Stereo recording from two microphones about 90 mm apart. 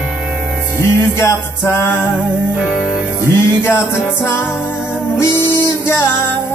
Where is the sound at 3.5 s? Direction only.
30° left (ahead or behind).